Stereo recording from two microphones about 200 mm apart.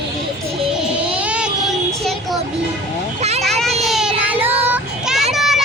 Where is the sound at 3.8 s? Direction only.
Centre (ahead or behind).